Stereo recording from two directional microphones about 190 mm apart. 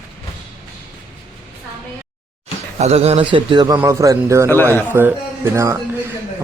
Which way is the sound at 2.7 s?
35° right (ahead or behind).